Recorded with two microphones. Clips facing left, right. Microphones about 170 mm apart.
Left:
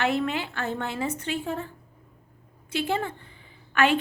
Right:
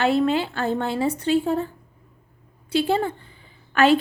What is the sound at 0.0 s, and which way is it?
A woman's voice, 30° right (ahead or behind).